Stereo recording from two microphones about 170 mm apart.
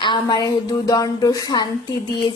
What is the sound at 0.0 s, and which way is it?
Speech, 25° left (ahead or behind).